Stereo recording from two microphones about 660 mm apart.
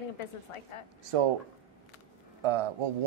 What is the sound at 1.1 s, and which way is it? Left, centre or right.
Speech, right.